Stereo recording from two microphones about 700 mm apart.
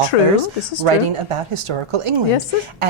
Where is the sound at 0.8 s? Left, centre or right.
Right.